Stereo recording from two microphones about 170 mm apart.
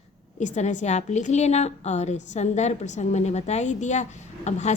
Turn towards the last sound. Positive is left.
turn(degrees=40)  # may be behind; listen again after turning